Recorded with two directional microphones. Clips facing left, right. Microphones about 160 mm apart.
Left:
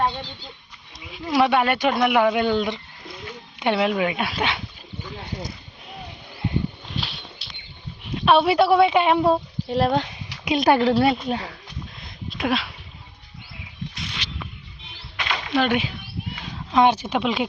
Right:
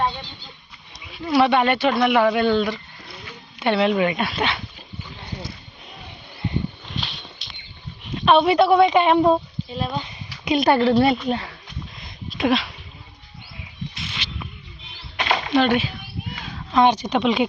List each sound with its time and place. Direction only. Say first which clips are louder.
1.1 s speech: right 2 dB; 10° left (ahead or behind)
7.0 s a sound: even; 5° left (ahead or behind)
8.1 s a woman's voice: right 1 dB; 5° left (ahead or behind)
9.6 s speech: left 7 dB; 75° left (ahead or behind)
10.4 s a woman's voice: right 1 dB; centre (ahead or behind)
12.4 s speech: right 4 dB; centre (ahead or behind)
13.9 s a sound: even; centre (ahead or behind)
15.2 s a sound: right 6 dB; 40° right (ahead or behind)
15.5 s a woman's voice: right 2 dB; 10° left (ahead or behind)